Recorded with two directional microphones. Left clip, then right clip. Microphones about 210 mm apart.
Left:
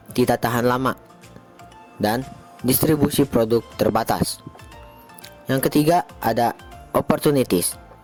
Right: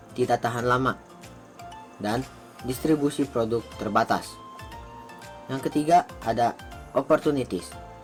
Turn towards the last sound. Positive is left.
turn(degrees=55)  # may be behind; listen again after turning